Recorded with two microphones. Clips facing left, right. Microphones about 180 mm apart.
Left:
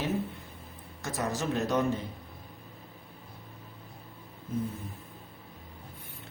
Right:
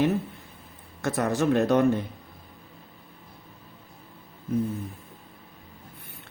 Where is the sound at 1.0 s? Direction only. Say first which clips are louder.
Right 8 dB; 60° right (ahead or behind).